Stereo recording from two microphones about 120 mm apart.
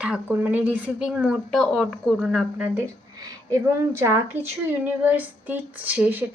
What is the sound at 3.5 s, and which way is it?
A woman's voice, 20° right (ahead or behind).